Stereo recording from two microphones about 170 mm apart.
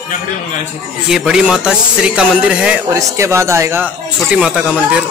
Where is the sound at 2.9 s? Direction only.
15° right (ahead or behind).